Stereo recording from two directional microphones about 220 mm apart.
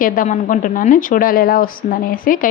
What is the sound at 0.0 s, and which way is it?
A woman's voice, 35° left (ahead or behind).